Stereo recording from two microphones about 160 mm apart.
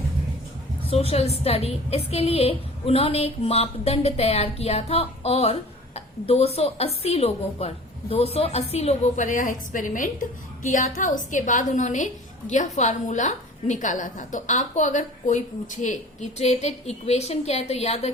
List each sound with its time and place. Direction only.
0.9 s a woman's voice: 40° left (ahead or behind)